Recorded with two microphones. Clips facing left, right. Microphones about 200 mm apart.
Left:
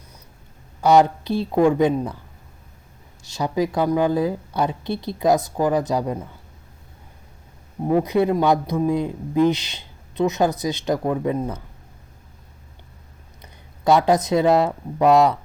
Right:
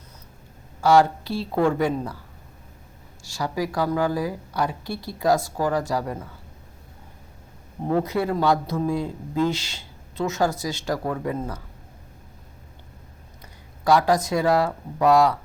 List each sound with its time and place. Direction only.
0.8 s a man's voice: 20° left (ahead or behind)
3.2 s a man's voice: 20° left (ahead or behind)
7.9 s a man's voice: 15° left (ahead or behind)
13.4 s speech: 20° left (ahead or behind)